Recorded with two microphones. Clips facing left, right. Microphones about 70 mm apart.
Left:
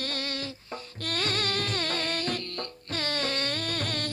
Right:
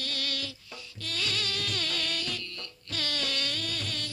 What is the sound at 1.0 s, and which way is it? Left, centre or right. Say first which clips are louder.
Music: left 4 dB; left.